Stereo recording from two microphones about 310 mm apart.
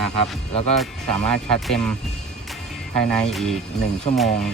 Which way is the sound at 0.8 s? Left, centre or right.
Centre.